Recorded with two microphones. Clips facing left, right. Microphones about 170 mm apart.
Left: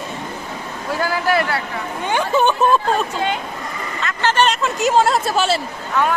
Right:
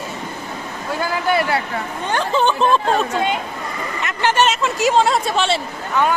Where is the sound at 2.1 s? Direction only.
15° left (ahead or behind).